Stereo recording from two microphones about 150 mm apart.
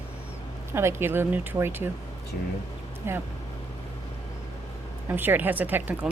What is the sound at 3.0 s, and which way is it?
Speech, 15° right (ahead or behind).